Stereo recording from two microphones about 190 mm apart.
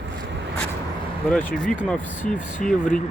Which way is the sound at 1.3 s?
5° left (ahead or behind).